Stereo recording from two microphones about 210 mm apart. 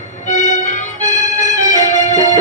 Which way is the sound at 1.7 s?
35° left (ahead or behind).